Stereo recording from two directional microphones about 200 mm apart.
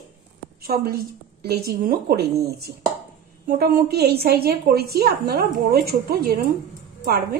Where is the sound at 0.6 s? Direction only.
50° right (ahead or behind).